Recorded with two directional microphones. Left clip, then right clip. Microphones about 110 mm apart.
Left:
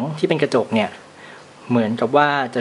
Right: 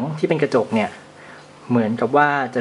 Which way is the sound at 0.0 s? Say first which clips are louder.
Left 1 dB; 15° left (ahead or behind).